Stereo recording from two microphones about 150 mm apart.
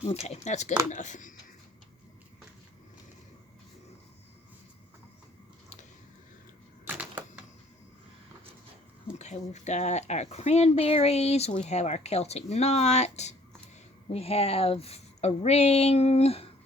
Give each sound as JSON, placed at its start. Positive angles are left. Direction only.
{"t": 0.0, "sound": "speech", "side_deg": 45}
{"t": 6.8, "sound": "typewriter", "side_deg": -10}
{"t": 9.1, "sound": "speech", "side_deg": 50}